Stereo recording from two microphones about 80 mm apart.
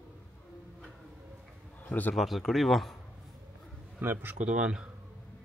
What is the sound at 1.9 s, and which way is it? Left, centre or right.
Speech, left.